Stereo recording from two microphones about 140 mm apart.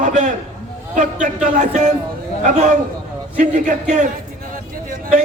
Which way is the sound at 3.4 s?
65° right (ahead or behind).